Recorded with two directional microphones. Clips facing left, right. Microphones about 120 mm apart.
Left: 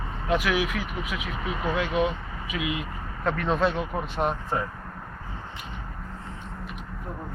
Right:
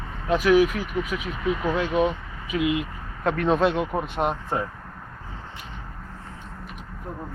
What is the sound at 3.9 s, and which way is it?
Speech, 15° right (ahead or behind).